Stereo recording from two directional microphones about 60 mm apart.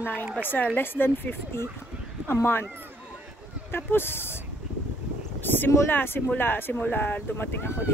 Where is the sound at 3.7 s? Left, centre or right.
Left.